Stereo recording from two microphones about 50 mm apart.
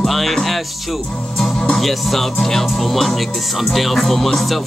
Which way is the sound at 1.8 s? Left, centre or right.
Centre.